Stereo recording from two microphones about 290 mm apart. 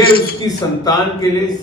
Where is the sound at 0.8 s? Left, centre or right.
Centre.